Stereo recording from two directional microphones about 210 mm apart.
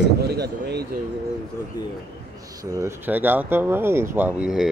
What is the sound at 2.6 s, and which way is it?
Speech, 15° right (ahead or behind).